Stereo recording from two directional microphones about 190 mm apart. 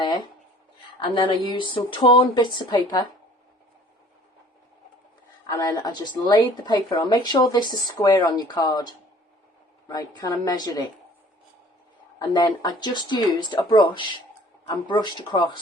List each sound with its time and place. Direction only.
0.9 s speech: 25° left (ahead or behind)
5.5 s speech: 20° left (ahead or behind)
12.3 s speech: 25° left (ahead or behind)